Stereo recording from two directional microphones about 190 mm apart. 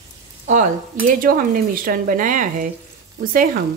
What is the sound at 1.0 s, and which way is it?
Speech, 45° right (ahead or behind).